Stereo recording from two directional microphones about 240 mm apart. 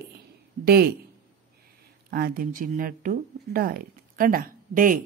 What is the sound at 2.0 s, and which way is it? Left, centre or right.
A woman's voice, right.